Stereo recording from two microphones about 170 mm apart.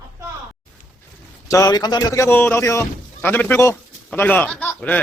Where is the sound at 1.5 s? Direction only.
20° left (ahead or behind).